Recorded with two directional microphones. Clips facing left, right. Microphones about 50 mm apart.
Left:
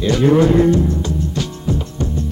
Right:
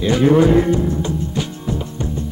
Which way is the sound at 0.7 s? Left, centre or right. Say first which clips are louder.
Left 1 dB; centre.